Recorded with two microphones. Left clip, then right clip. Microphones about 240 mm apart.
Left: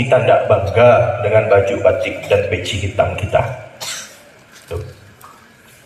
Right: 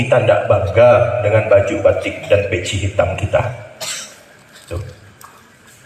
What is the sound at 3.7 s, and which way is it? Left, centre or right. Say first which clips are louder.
Cough: right 1 dB; centre.